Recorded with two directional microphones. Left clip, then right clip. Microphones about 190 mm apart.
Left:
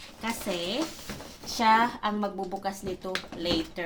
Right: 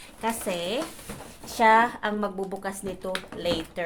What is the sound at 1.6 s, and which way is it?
A woman's voice, 45° right (ahead or behind).